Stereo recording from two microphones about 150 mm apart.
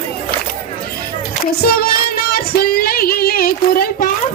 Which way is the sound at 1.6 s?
90° left.